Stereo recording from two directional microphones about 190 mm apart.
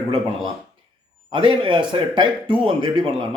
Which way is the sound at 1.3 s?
25° right (ahead or behind).